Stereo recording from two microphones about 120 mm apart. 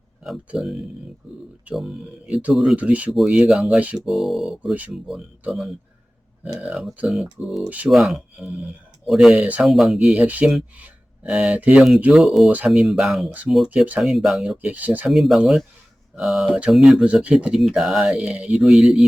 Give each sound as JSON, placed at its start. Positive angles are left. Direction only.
{"t": 0.3, "sound": "speech", "side_deg": 0}
{"t": 4.7, "sound": "speech", "side_deg": -15}
{"t": 5.5, "sound": "speech", "side_deg": 0}
{"t": 7.9, "sound": "speech", "side_deg": 0}
{"t": 12.1, "sound": "speech", "side_deg": 0}
{"t": 12.5, "sound": "speech", "side_deg": -15}
{"t": 12.7, "sound": "speech", "side_deg": 0}
{"t": 13.7, "sound": "speech", "side_deg": -15}
{"t": 14.0, "sound": "speech", "side_deg": 0}
{"t": 14.6, "sound": "speech", "side_deg": -15}
{"t": 15.1, "sound": "speech", "side_deg": 0}